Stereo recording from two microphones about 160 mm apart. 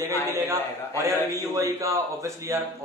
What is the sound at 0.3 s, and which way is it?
A man's voice, 15° right (ahead or behind).